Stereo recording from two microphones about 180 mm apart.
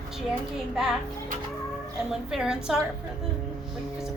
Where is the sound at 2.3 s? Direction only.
5° right (ahead or behind).